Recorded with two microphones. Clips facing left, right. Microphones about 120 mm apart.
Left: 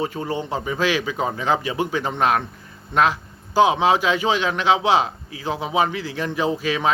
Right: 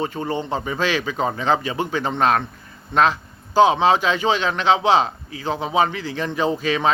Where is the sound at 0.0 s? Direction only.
10° left (ahead or behind).